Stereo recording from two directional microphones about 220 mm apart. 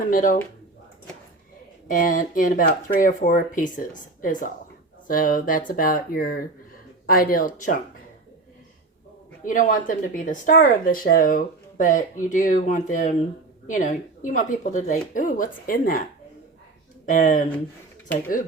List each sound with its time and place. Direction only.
0.0 s speech: 40° left (ahead or behind)
1.9 s speech: 40° left (ahead or behind)
9.4 s speech: 35° left (ahead or behind)
17.1 s speech: 35° left (ahead or behind)